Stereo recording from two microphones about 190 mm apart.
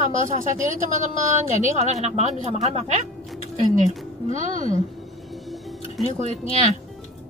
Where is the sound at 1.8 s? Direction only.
35° right (ahead or behind).